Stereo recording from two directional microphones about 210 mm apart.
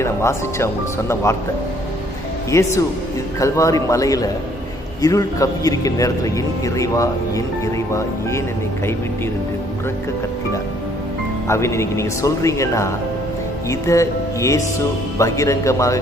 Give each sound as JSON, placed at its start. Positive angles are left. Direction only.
{"t": 0.0, "sound": "a man's voice", "side_deg": 15}
{"t": 2.5, "sound": "a man's voice", "side_deg": 15}
{"t": 11.4, "sound": "a man's voice", "side_deg": 15}